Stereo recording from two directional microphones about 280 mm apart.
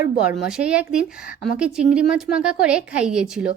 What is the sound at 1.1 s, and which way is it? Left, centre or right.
Speech, left.